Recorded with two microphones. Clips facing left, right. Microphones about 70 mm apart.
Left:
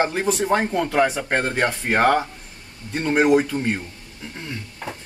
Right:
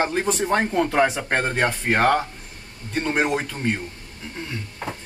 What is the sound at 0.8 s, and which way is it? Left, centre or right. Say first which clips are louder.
Speech: even; centre.